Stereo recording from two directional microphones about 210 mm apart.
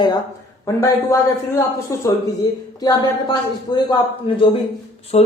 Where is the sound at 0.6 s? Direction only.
15° left (ahead or behind).